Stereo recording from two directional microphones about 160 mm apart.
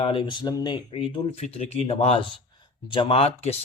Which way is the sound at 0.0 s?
35° left (ahead or behind).